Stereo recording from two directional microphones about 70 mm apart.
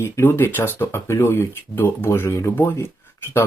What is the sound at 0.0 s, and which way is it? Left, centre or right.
Speech, left.